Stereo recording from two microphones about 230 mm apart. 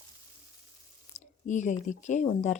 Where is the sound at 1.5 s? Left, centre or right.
Left.